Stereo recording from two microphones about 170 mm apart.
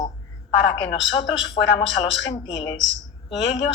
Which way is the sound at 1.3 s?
30° left (ahead or behind).